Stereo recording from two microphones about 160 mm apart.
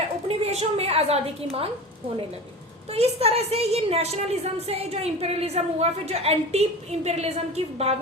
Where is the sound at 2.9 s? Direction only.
40° right (ahead or behind).